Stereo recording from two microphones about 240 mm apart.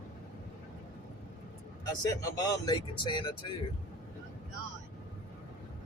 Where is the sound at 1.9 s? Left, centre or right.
Centre.